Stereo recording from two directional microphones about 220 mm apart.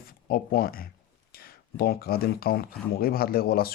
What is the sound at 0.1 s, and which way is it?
A man's voice, 40° left (ahead or behind).